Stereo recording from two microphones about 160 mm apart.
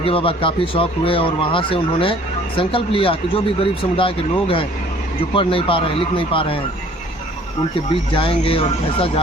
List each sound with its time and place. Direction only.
0.0 s speech: 35° left (ahead or behind)
8.1 s speech: 35° left (ahead or behind)